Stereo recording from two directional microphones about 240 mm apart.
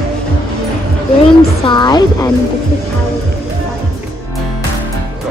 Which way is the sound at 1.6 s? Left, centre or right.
Centre.